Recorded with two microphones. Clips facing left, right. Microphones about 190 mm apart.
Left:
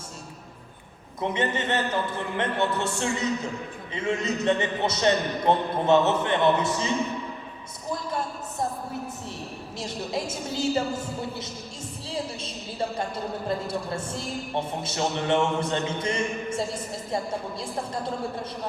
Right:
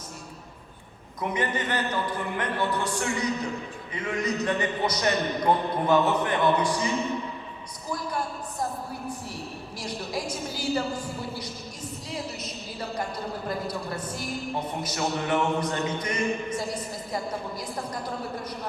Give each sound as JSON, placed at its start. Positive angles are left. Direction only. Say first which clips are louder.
{"t": 1.2, "sound": "a man's voice", "louder": "left 2 dB", "side_deg": 25}
{"t": 9.7, "sound": "a man's voice", "louder": "left 2 dB", "side_deg": 25}
{"t": 13.5, "sound": "a man's voice", "louder": "left 3 dB", "side_deg": 25}